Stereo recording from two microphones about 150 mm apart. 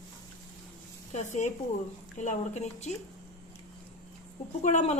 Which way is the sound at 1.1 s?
50° left (ahead or behind).